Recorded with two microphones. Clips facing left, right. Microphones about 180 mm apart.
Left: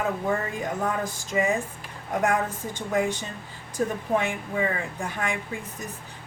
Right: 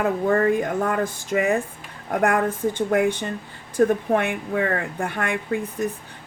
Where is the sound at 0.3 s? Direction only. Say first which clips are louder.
Right 8 dB; 55° right (ahead or behind).